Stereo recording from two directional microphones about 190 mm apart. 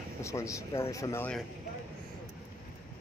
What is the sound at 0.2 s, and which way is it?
Speech, 15° left (ahead or behind).